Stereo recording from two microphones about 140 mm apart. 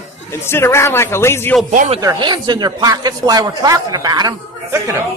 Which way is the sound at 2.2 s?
30° right (ahead or behind).